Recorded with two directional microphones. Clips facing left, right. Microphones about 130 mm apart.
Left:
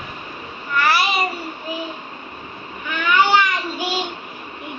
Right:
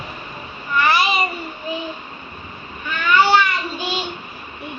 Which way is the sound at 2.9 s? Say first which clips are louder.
Right 1 dB; 15° left (ahead or behind).